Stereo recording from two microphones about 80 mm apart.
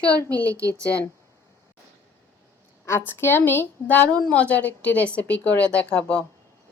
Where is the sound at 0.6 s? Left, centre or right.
Right.